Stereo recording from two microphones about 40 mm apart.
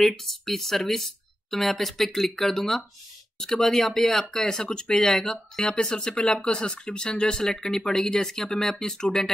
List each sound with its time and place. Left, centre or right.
0.0 s speech: centre
7.4 s speech: centre